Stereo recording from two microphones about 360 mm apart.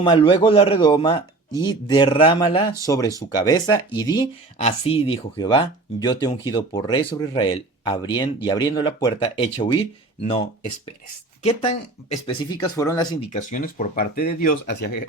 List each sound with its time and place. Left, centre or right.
0.0 s speech: centre
13.3 s speech: left